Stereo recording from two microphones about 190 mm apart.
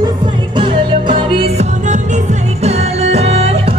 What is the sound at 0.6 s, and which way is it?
Music, 25° right (ahead or behind).